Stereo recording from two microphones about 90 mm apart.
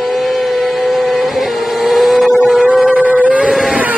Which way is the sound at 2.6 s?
15° right (ahead or behind).